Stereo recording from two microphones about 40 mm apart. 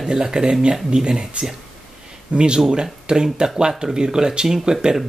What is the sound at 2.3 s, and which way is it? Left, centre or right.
Speech, right.